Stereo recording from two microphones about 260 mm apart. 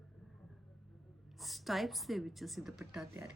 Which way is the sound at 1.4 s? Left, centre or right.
Centre.